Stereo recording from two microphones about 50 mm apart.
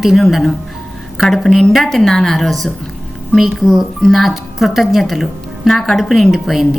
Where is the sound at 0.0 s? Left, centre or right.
Centre.